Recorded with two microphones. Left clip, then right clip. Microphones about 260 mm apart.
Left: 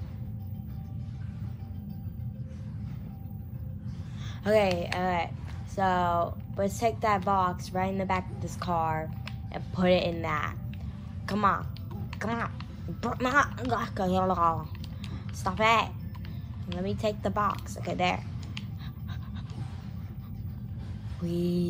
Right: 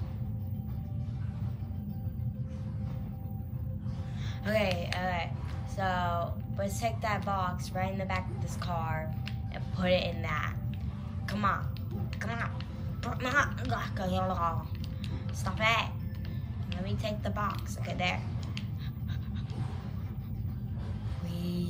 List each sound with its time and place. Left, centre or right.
4.5 s a woman's voice: centre
21.3 s a woman's voice: centre